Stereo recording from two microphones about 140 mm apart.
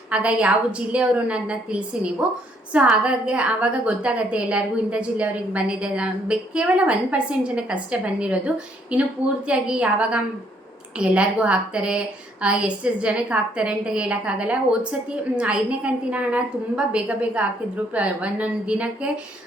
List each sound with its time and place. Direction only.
0.1 s a woman's voice: 10° right (ahead or behind)